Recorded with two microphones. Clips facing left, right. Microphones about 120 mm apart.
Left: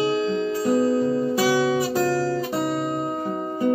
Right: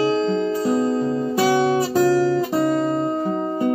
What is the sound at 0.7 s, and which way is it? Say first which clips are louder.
Music: left 3 dB; 30° right (ahead or behind).